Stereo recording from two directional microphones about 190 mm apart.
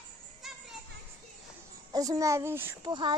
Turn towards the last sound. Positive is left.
turn(degrees=-25)  # may be behind; listen again after turning